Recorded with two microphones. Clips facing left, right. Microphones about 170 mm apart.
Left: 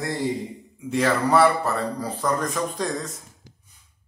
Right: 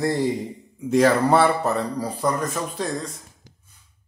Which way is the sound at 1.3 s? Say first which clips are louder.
Right 1 dB; 25° right (ahead or behind).